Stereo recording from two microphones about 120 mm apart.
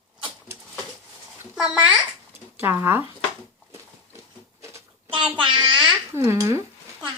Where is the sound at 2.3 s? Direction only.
20° right (ahead or behind).